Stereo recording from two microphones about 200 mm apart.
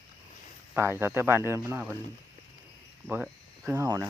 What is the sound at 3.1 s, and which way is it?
Speech, 10° right (ahead or behind).